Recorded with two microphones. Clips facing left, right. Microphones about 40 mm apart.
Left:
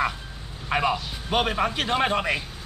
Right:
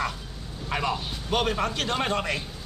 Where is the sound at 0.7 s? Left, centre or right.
Centre.